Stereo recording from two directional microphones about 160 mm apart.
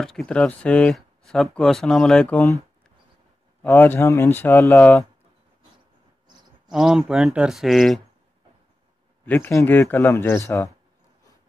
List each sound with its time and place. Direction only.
0.0 s speech: 5° left (ahead or behind)
3.6 s speech: 10° left (ahead or behind)
6.7 s speech: 5° right (ahead or behind)
9.2 s speech: 10° left (ahead or behind)